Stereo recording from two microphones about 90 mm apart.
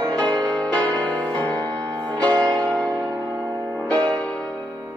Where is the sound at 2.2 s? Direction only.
50° right (ahead or behind).